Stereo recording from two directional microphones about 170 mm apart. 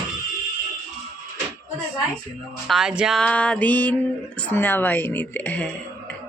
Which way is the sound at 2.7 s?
Centre (ahead or behind).